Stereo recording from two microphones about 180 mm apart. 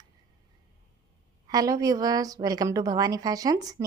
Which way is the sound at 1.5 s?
20° right (ahead or behind).